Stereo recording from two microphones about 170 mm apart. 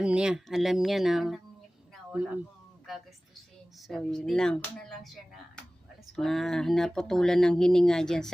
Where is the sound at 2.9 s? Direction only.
Centre (ahead or behind).